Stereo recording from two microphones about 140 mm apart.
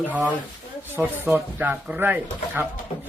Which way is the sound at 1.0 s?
15° right (ahead or behind).